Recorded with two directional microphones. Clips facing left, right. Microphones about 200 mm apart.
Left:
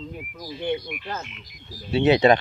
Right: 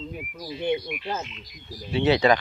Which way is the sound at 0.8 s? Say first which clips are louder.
Right 2 dB; 5° right (ahead or behind).